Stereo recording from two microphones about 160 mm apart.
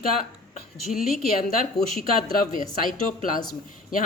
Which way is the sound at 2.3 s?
65° left (ahead or behind).